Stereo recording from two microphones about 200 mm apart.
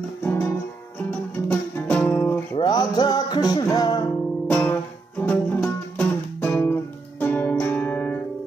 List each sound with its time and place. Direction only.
0.2 s music: 10° left (ahead or behind)
1.5 s music: 10° left (ahead or behind)
2.5 s music: 20° left (ahead or behind)
4.5 s music: 5° left (ahead or behind)